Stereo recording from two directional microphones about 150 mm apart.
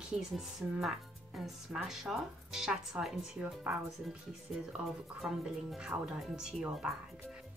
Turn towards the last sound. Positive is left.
turn(degrees=-5)  # may be behind; listen again after turning